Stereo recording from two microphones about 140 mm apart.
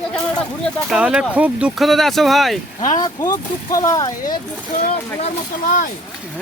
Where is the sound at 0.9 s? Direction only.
5° right (ahead or behind).